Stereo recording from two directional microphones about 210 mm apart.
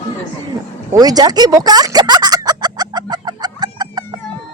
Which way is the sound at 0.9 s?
20° right (ahead or behind).